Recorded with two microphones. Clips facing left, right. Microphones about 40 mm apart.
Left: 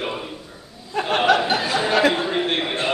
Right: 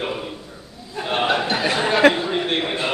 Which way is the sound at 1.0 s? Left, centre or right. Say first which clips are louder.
Left 4 dB; left.